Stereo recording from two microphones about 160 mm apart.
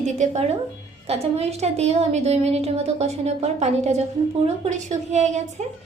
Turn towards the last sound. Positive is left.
turn(degrees=-45)  # may be behind; listen again after turning